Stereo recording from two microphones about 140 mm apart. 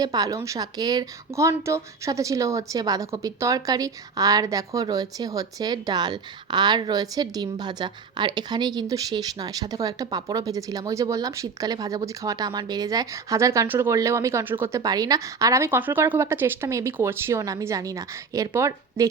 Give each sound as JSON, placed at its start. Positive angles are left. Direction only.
{"t": 0.0, "sound": "speech", "side_deg": -30}
{"t": 14.8, "sound": "speech", "side_deg": -25}